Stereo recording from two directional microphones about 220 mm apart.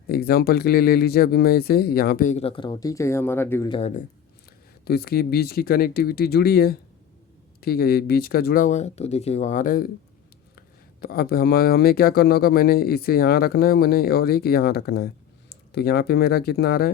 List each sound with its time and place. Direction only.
0.1 s speech: 45° left (ahead or behind); by 3.7 s 10° left (ahead or behind)
3.7 s speech: 30° left (ahead or behind)
4.9 s speech: 45° left (ahead or behind)
11.0 s speech: 45° left (ahead or behind)